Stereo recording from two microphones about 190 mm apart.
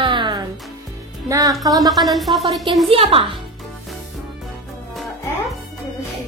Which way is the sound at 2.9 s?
30° right (ahead or behind).